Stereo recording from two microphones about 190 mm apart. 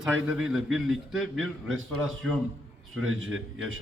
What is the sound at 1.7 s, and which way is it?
Speech, 90° right.